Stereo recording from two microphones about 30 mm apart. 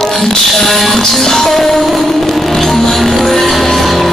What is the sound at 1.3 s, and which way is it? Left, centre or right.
Music, centre.